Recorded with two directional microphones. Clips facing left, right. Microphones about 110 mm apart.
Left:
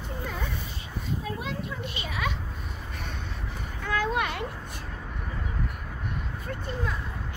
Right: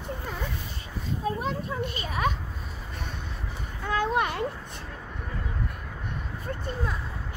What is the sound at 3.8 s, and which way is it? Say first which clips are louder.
Children playing: right 2 dB; 25° right (ahead or behind).